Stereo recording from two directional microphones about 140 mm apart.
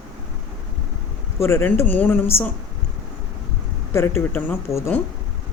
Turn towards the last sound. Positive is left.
turn(degrees=15)  # may be behind; listen again after turning